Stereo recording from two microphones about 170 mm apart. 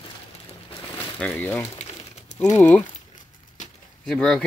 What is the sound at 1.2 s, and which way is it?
Speech, 10° left (ahead or behind).